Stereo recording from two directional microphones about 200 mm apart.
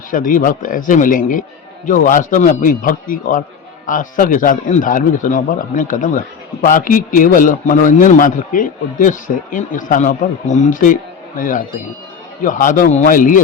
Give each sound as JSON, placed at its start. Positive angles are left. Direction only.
{"t": 0.1, "sound": "speech", "side_deg": 45}